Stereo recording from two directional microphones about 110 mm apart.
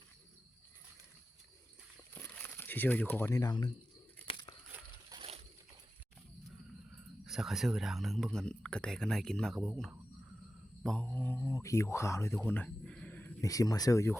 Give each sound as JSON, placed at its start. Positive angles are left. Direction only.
{"t": 2.1, "sound": "crumpling", "side_deg": 20}
{"t": 3.3, "sound": "speech", "side_deg": 40}
{"t": 5.1, "sound": "splash", "side_deg": -35}
{"t": 7.3, "sound": "speech", "side_deg": 0}
{"t": 10.8, "sound": "speech", "side_deg": 10}
{"t": 13.4, "sound": "speech", "side_deg": 30}